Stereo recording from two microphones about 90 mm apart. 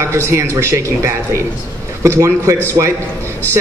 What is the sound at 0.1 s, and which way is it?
Speech, 30° right (ahead or behind).